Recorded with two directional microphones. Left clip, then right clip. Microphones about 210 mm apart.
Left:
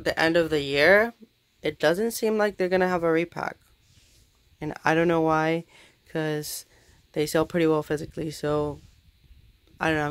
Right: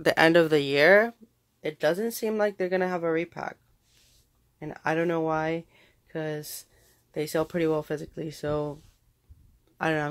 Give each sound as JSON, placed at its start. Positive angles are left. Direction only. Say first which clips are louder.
{"t": 0.0, "sound": "speech", "louder": "right 2 dB", "side_deg": -30}
{"t": 1.6, "sound": "speech", "louder": "left 3 dB", "side_deg": 20}
{"t": 4.6, "sound": "speech", "louder": "left 4 dB", "side_deg": 30}
{"t": 9.8, "sound": "speech", "louder": "left 2 dB", "side_deg": 0}